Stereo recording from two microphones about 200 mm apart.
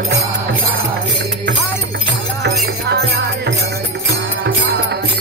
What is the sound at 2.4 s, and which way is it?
Music, 55° right (ahead or behind).